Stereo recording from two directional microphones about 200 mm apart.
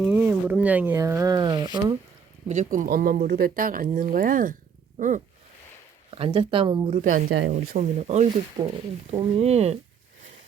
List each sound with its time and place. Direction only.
0.0 s speech: 10° right (ahead or behind)
2.5 s speech: 40° right (ahead or behind)
4.9 s a sound: 40° right (ahead or behind)
6.1 s speech: 25° right (ahead or behind)
7.0 s speech: 40° right (ahead or behind)